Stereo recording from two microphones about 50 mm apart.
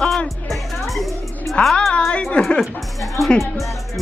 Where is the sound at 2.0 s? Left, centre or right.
Centre.